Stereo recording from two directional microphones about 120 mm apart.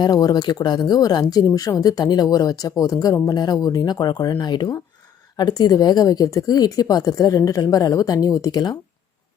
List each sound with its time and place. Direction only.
0.0 s speech: 35° left (ahead or behind)